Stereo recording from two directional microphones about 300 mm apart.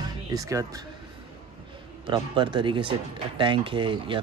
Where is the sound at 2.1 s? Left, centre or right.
Centre.